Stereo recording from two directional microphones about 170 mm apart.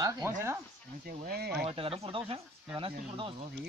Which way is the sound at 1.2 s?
70° right (ahead or behind).